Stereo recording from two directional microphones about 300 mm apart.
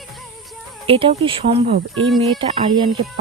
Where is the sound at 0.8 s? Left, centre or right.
Centre.